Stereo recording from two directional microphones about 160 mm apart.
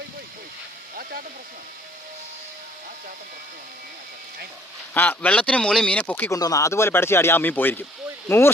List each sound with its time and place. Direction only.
4.9 s speech: 10° left (ahead or behind)
6.4 s speech: 20° left (ahead or behind)